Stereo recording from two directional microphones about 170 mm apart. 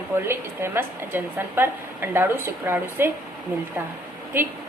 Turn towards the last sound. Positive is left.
turn(degrees=-15)  # may be behind; listen again after turning